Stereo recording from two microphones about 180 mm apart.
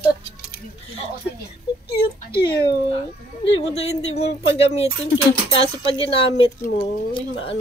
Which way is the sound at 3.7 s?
35° left (ahead or behind).